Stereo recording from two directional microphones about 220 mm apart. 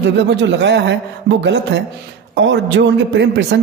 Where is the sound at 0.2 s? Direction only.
55° right (ahead or behind).